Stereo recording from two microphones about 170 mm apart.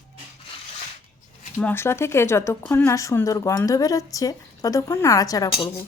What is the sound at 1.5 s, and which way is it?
Speech, 15° left (ahead or behind).